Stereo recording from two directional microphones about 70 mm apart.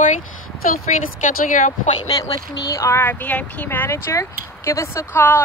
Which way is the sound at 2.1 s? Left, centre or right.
Left.